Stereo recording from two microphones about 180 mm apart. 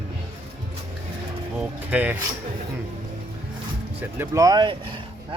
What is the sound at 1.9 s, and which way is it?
Speech, 5° right (ahead or behind).